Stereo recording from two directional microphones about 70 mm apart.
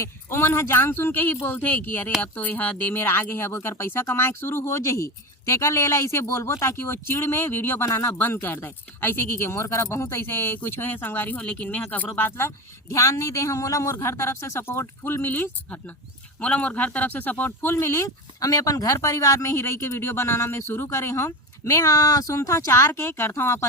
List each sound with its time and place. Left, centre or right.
0.0 s speech: left
12.9 s speech: left